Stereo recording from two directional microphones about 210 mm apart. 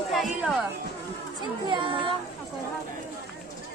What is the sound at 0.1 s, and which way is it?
Speech, centre (ahead or behind).